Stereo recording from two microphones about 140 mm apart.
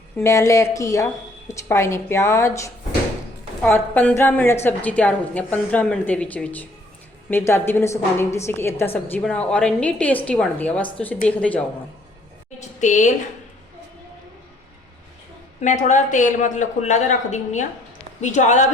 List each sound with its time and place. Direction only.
0.2 s a woman's voice: 20° left (ahead or behind)
12.5 s a woman's voice: 60° left (ahead or behind)
15.6 s a man's voice: 60° left (ahead or behind)